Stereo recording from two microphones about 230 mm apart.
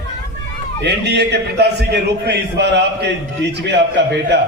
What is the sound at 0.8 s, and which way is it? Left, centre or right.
A man's voice, right.